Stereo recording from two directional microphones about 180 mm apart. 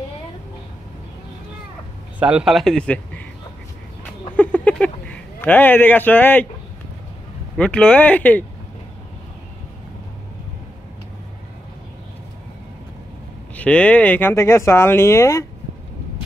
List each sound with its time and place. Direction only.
2.1 s speech: 5° right (ahead or behind)
4.4 s speech: 10° left (ahead or behind)
7.5 s speech: 5° left (ahead or behind)
13.6 s speech: 5° left (ahead or behind)